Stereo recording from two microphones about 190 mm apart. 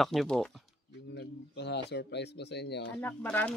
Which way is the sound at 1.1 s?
60° left (ahead or behind).